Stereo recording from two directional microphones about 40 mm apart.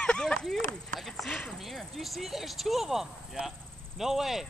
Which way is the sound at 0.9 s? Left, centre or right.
Centre.